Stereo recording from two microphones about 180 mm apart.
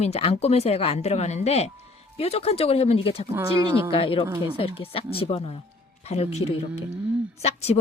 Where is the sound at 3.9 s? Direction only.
30° left (ahead or behind).